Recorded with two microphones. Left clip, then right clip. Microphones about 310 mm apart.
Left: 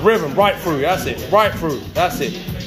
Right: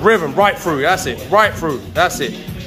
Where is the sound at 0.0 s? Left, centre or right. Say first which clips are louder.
Right 2 dB; centre.